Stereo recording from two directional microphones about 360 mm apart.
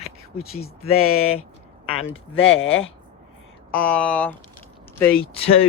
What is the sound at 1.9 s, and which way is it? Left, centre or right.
Speech, left.